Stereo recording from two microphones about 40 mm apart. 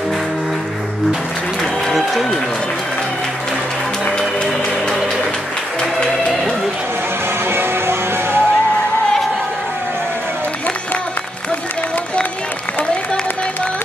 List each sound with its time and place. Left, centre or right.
7.5 s music: right